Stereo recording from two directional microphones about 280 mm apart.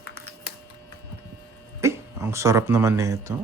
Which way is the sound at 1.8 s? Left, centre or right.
Centre.